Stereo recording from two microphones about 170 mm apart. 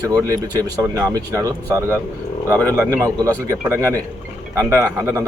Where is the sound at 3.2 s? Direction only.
20° right (ahead or behind).